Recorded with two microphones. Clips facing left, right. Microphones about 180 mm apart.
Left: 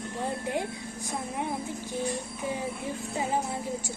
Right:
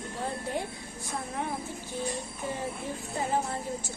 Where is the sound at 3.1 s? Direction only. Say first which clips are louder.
Even; 15° left (ahead or behind).